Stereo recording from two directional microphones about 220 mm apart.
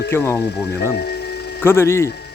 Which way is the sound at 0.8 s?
45° left (ahead or behind).